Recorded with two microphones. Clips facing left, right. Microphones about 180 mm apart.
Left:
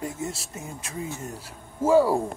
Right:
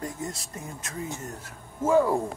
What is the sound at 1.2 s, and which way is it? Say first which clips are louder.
Speech: left 2 dB; 10° left (ahead or behind).